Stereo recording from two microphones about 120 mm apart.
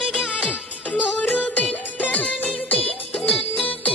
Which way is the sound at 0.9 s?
10° left (ahead or behind).